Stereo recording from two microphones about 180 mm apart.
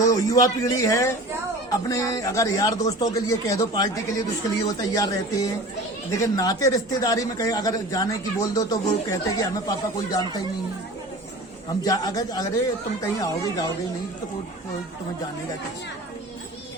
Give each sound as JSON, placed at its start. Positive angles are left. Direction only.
{"t": 0.0, "sound": "speech", "side_deg": 20}
{"t": 11.8, "sound": "speech", "side_deg": 20}